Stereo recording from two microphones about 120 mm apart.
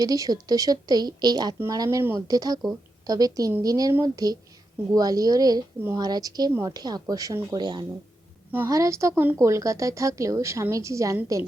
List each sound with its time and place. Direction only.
0.0 s speech: 30° right (ahead or behind)
8.5 s speech: 25° right (ahead or behind)